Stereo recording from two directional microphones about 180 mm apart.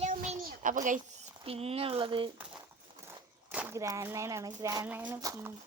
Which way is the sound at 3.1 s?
10° right (ahead or behind).